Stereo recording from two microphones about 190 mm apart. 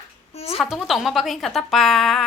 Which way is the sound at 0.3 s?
35° left (ahead or behind).